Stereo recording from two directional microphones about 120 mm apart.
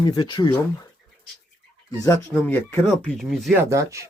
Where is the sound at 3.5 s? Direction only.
25° right (ahead or behind).